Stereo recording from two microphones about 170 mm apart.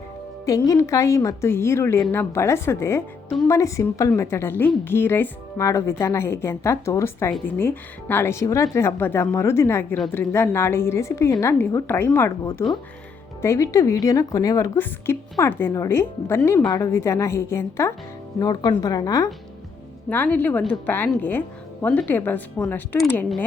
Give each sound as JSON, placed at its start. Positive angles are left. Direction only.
{"t": 0.4, "sound": "speech", "side_deg": 20}
{"t": 20.1, "sound": "speech", "side_deg": 10}